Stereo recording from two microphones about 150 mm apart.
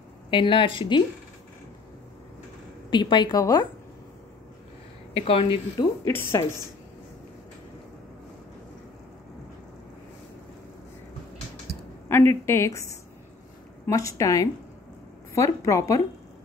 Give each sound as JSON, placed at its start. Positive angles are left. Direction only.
{"t": 0.3, "sound": "speech", "side_deg": 35}
{"t": 2.9, "sound": "a woman's voice", "side_deg": 30}
{"t": 5.1, "sound": "speech", "side_deg": 40}
{"t": 6.0, "sound": "a woman's voice", "side_deg": 15}
{"t": 12.1, "sound": "a woman's voice", "side_deg": 15}